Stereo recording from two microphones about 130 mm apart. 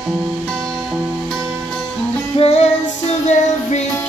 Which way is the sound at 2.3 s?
55° left (ahead or behind).